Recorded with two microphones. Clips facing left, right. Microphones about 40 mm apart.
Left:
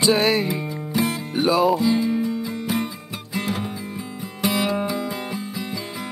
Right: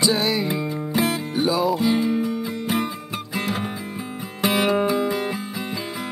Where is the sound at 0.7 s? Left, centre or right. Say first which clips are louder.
Right 1 dB; right.